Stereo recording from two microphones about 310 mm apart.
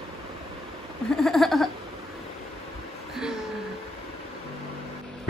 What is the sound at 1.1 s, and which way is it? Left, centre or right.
Speech, centre.